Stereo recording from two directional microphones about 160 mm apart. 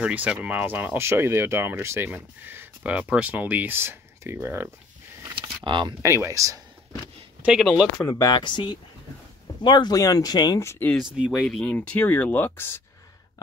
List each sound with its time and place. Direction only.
0.0 s speech: 10° right (ahead or behind)
5.3 s a sound: 30° right (ahead or behind)
6.0 s speech: 15° right (ahead or behind)
8.1 s speech: 25° left (ahead or behind)
11.1 s speech: 5° right (ahead or behind); by 12.8 s 15° left (ahead or behind)